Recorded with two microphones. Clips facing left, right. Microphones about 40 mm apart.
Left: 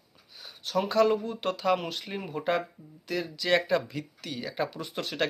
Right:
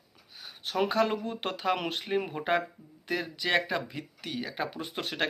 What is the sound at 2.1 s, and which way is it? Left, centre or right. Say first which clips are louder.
Speech: right 1 dB; right.